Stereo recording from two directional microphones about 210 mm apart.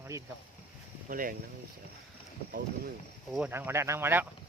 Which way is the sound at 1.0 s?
40° right (ahead or behind).